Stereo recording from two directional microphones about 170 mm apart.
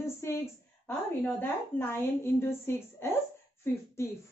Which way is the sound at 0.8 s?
5° left (ahead or behind).